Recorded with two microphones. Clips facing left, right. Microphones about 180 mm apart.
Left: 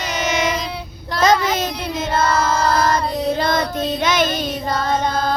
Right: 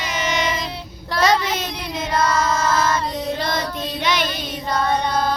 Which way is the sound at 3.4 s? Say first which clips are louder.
Left 5 dB; 50° left (ahead or behind).